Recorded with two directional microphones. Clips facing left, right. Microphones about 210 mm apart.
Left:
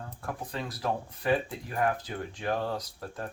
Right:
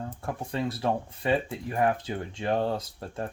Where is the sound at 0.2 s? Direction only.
25° right (ahead or behind).